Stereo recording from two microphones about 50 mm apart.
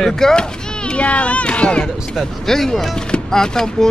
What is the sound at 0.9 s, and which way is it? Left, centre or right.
Speech, left.